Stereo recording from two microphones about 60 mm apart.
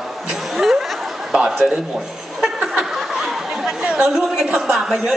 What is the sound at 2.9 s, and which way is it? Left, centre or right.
Chatter, centre.